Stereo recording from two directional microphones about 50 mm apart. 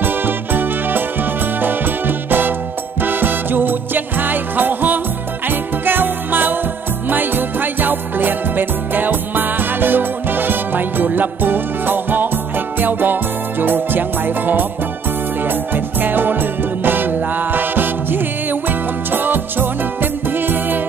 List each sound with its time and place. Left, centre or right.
0.0 s music: right